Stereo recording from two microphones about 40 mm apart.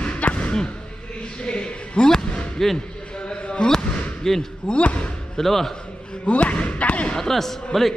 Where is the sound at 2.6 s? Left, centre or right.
Centre.